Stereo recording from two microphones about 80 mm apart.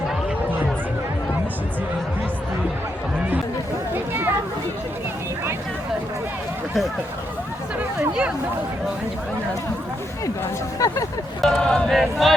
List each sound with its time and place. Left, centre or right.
3.9 s a sound: right
10.8 s speech: left
11.3 s speech: centre